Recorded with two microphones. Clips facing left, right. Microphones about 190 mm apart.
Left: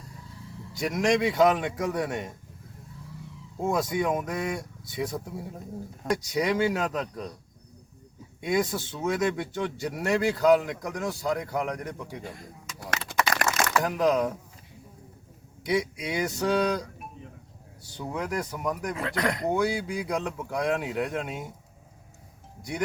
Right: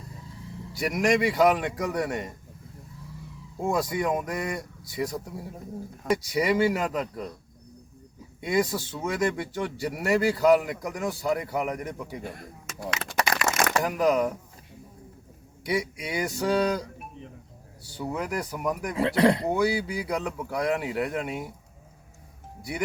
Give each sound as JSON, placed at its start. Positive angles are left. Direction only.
{"t": 0.8, "sound": "speech", "side_deg": -5}
{"t": 3.6, "sound": "speech", "side_deg": 0}
{"t": 8.4, "sound": "speech", "side_deg": 0}
{"t": 13.8, "sound": "speech", "side_deg": 0}
{"t": 15.6, "sound": "speech", "side_deg": 0}
{"t": 17.9, "sound": "speech", "side_deg": -5}
{"t": 18.9, "sound": "speech", "side_deg": -30}
{"t": 19.5, "sound": "speech", "side_deg": -5}